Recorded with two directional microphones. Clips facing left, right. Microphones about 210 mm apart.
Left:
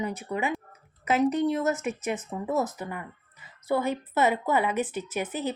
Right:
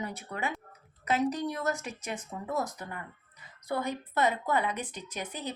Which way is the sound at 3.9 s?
5° left (ahead or behind).